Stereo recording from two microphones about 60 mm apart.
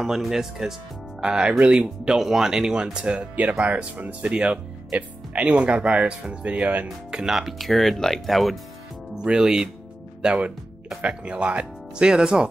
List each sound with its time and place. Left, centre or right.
0.0 s speech: centre; by 6.9 s right
7.1 s speech: centre
9.2 s speech: centre